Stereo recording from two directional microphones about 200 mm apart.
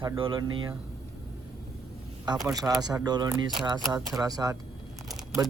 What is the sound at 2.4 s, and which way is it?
A man's voice, 20° right (ahead or behind).